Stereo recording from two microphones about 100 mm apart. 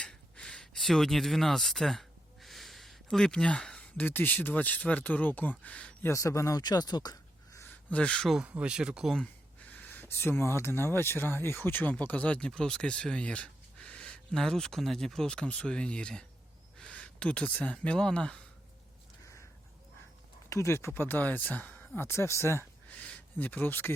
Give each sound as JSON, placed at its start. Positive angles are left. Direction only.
{"t": 0.0, "sound": "speech", "side_deg": 10}
{"t": 6.0, "sound": "speech", "side_deg": 30}
{"t": 6.6, "sound": "speech", "side_deg": 45}
{"t": 7.9, "sound": "speech", "side_deg": 10}
{"t": 8.3, "sound": "speech", "side_deg": -10}
{"t": 9.2, "sound": "speech", "side_deg": 15}
{"t": 20.5, "sound": "speech", "side_deg": 30}
{"t": 23.0, "sound": "speech", "side_deg": 15}